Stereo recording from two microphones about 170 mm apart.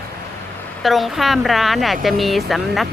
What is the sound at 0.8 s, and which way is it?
Speech, centre (ahead or behind).